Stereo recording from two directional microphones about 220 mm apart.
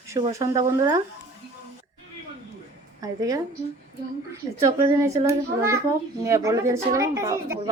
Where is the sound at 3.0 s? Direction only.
15° right (ahead or behind).